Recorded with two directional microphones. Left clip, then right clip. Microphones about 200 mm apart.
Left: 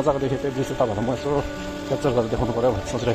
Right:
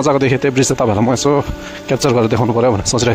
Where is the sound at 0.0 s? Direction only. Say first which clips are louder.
Right 9 dB; 50° right (ahead or behind).